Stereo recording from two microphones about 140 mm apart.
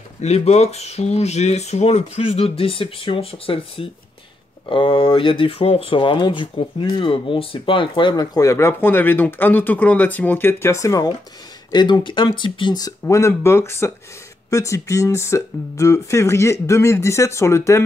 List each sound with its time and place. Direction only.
0.2 s speech: 50° left (ahead or behind); by 12.9 s 30° left (ahead or behind)
13.0 s speech: 20° left (ahead or behind)